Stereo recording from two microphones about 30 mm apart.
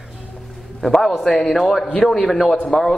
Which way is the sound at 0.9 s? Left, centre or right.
Centre.